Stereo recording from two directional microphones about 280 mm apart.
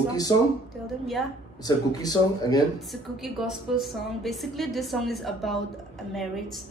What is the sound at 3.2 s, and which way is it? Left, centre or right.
A woman's voice, centre.